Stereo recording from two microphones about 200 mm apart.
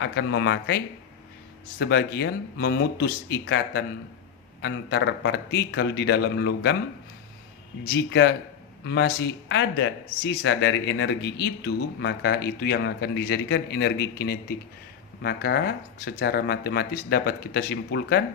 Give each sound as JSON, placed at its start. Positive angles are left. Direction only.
{"t": 0.0, "sound": "speech", "side_deg": 65}
{"t": 1.8, "sound": "speech", "side_deg": 55}
{"t": 7.9, "sound": "speech", "side_deg": 60}